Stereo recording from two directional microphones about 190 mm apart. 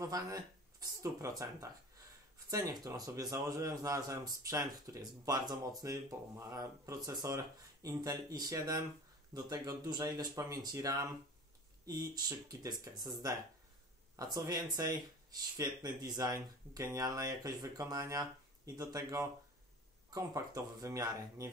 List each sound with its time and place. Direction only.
0.0 s speech: 20° right (ahead or behind)
2.3 s a man's voice: 20° right (ahead or behind)